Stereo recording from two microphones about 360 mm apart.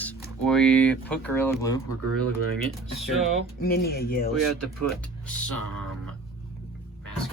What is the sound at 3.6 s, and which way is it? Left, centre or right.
Speech, left.